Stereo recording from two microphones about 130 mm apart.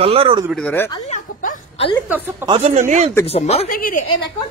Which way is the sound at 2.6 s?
60° right (ahead or behind).